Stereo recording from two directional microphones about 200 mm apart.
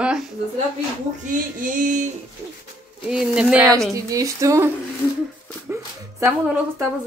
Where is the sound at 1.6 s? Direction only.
40° right (ahead or behind).